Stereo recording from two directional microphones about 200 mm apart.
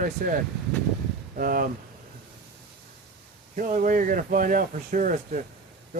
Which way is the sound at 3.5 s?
40° right (ahead or behind).